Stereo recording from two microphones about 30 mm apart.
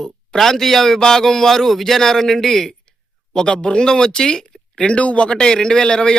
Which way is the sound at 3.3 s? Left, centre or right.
Left.